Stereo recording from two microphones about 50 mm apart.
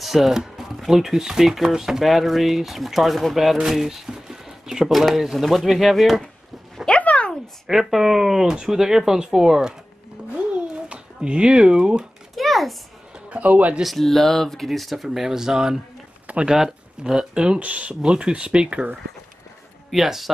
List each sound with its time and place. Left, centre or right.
0.0 s speech: centre
7.0 s a sound: left
7.8 s speech: centre
10.3 s a sound: right
12.4 s a sound: centre
13.3 s a man's voice: right
13.8 s speech: centre
15.0 s speech: centre
19.9 s speech: centre